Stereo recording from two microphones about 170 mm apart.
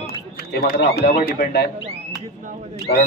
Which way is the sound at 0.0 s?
65° left (ahead or behind).